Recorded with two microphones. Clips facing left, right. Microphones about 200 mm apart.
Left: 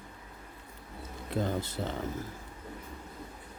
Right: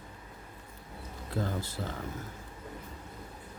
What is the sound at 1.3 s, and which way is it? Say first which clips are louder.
Speech: left 3 dB; 20° left (ahead or behind).